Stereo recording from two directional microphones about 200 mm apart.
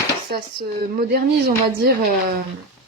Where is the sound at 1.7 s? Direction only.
50° right (ahead or behind).